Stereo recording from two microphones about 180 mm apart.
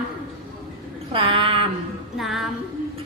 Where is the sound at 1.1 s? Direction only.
30° right (ahead or behind).